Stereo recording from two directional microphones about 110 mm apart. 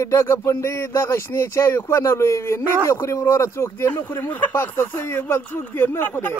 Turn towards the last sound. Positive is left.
turn(degrees=15)  # may be behind; listen again after turning